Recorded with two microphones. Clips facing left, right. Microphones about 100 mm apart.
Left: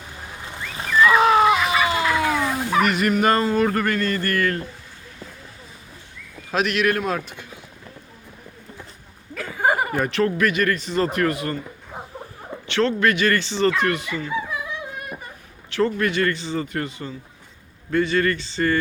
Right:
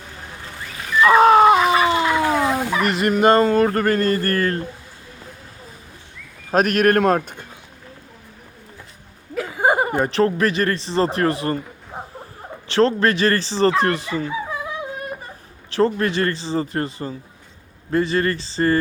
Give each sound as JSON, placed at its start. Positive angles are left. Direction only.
{"t": 1.0, "sound": "a sound", "side_deg": -40}
{"t": 3.4, "sound": "speech", "side_deg": -40}
{"t": 6.5, "sound": "speech", "side_deg": -45}
{"t": 9.3, "sound": "speech", "side_deg": -20}
{"t": 12.6, "sound": "speech", "side_deg": -35}
{"t": 15.7, "sound": "speech", "side_deg": -35}